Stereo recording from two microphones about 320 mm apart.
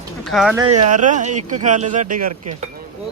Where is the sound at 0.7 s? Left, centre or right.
Right.